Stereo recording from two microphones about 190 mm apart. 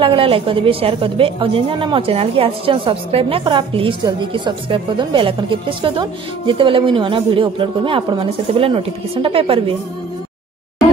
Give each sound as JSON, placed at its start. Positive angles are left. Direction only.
{"t": 0.0, "sound": "a woman's voice", "side_deg": -30}